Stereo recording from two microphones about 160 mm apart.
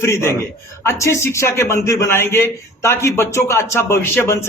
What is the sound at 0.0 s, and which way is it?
A man's voice, 15° left (ahead or behind).